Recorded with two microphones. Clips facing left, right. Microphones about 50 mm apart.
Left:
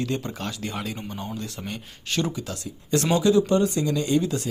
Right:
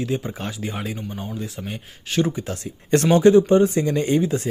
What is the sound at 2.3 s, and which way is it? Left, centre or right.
Speech, right.